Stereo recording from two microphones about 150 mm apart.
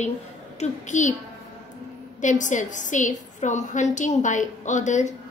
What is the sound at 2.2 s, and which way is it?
A woman's voice, 55° left (ahead or behind).